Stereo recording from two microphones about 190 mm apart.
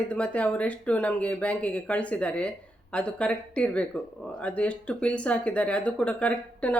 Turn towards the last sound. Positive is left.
turn(degrees=5)  # may be behind; listen again after turning